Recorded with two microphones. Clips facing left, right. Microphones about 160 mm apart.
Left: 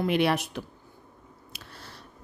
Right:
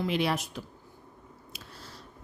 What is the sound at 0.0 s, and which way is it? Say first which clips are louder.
A woman's voice: left 4 dB; 60° left (ahead or behind).